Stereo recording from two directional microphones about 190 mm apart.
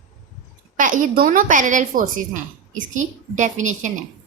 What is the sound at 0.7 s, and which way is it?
A woman's voice, 45° right (ahead or behind).